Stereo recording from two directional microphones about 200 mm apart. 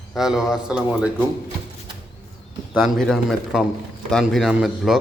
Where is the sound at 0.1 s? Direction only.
Centre (ahead or behind).